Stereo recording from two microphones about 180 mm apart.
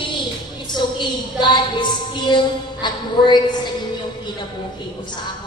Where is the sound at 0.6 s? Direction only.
25° left (ahead or behind).